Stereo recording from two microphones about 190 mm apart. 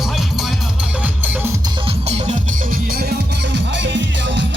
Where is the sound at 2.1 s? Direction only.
35° right (ahead or behind).